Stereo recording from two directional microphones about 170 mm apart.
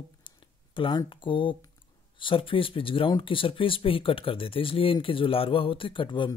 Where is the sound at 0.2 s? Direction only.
30° left (ahead or behind).